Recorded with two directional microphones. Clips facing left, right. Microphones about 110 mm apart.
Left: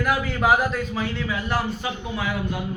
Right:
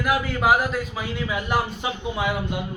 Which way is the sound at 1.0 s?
15° right (ahead or behind).